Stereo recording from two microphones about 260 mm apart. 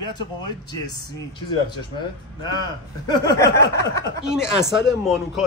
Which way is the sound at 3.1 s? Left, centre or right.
Centre.